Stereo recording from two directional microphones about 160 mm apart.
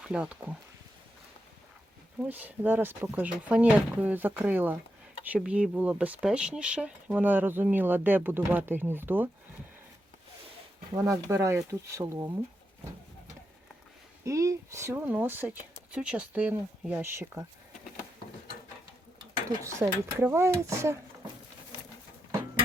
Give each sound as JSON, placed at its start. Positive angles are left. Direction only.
{"t": 0.0, "sound": "speech", "side_deg": -5}
{"t": 2.2, "sound": "speech", "side_deg": -10}
{"t": 10.9, "sound": "speech", "side_deg": -20}
{"t": 14.3, "sound": "speech", "side_deg": -20}
{"t": 19.6, "sound": "speech", "side_deg": -15}